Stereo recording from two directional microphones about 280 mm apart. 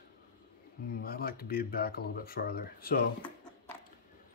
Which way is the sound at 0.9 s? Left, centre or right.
Left.